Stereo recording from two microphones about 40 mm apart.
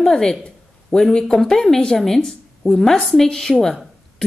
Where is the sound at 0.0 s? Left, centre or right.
Centre.